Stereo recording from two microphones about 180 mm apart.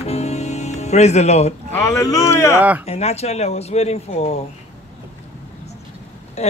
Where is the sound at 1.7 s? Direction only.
15° left (ahead or behind).